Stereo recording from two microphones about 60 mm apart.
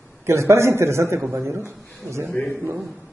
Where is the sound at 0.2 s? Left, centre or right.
Right.